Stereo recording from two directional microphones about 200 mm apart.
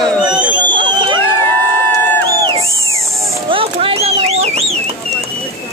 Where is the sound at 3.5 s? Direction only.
25° right (ahead or behind).